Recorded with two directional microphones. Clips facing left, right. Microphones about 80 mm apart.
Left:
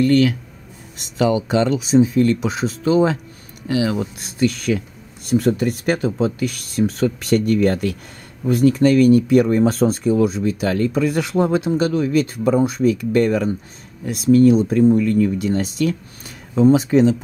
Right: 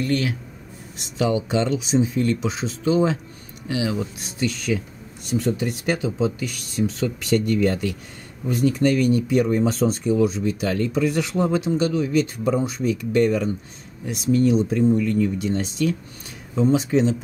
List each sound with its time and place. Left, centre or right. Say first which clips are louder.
0.0 s speech: left 8 dB; left